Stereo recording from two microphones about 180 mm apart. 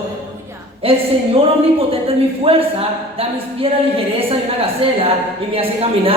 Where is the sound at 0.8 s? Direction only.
30° right (ahead or behind).